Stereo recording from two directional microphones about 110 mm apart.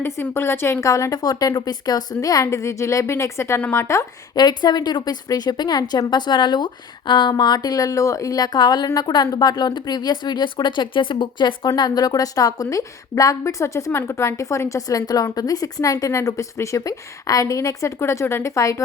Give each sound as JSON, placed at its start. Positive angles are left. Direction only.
{"t": 0.0, "sound": "a woman's voice", "side_deg": 20}
{"t": 4.4, "sound": "a woman's voice", "side_deg": 40}